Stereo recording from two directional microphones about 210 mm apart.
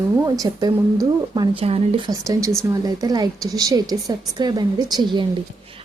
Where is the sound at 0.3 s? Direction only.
15° right (ahead or behind).